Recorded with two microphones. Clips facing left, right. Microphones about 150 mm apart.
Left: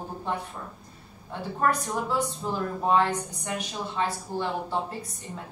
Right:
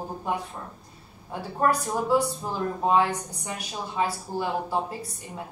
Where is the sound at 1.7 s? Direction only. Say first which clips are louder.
Right 2 dB; 35° right (ahead or behind).